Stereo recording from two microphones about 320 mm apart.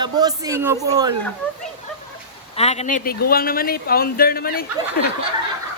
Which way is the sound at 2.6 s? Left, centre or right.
Centre.